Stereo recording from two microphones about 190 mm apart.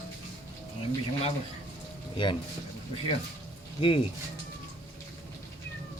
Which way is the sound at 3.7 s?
25° left (ahead or behind).